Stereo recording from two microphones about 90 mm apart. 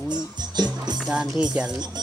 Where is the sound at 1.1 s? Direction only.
10° right (ahead or behind).